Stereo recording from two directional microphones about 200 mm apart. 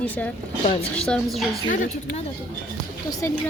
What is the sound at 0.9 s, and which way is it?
Speech, 5° left (ahead or behind).